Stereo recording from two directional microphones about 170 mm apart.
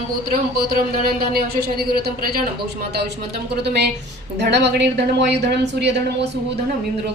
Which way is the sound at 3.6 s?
80° right.